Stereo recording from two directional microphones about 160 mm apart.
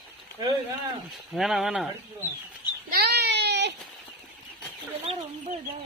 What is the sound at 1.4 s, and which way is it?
Speech, centre (ahead or behind).